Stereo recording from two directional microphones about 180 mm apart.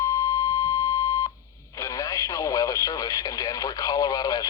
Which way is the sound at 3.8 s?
20° left (ahead or behind).